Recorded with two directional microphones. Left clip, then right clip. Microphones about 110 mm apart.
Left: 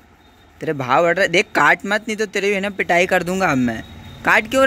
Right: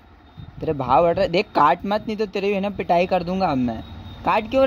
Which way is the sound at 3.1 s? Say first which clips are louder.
Left 4 dB; 25° left (ahead or behind).